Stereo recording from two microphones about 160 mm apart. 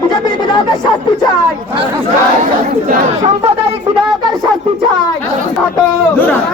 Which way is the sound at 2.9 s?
45° right (ahead or behind).